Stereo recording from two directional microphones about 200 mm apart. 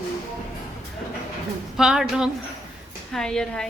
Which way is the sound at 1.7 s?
5° right (ahead or behind).